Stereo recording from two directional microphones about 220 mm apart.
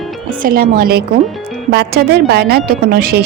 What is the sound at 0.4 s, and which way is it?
A woman's voice, 40° right (ahead or behind).